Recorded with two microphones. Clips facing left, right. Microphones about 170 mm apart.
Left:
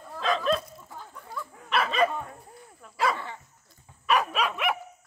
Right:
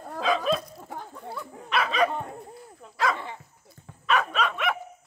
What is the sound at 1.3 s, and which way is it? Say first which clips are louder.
Dog: even; 20° right (ahead or behind).